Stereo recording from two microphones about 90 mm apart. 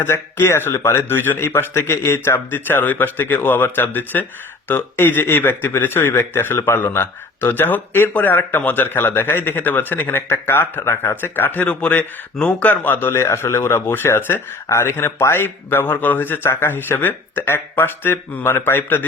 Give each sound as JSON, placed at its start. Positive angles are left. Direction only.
{"t": 0.0, "sound": "speech", "side_deg": 25}